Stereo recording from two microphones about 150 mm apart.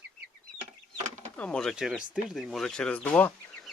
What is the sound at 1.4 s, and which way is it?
Speech, 5° left (ahead or behind).